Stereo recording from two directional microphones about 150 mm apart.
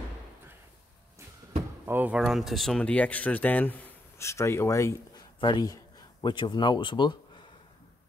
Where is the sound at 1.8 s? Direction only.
10° right (ahead or behind); by 7.1 s 30° left (ahead or behind).